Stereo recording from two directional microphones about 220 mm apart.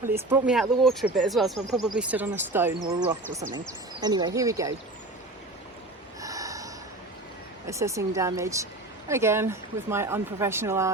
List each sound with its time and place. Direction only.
0.0 s speech: 10° right (ahead or behind)
4.0 s speech: 20° right (ahead or behind)
6.2 s snort: 15° right (ahead or behind)
7.7 s speech: 15° right (ahead or behind)